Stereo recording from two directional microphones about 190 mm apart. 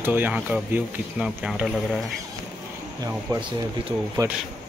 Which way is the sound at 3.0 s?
25° right (ahead or behind).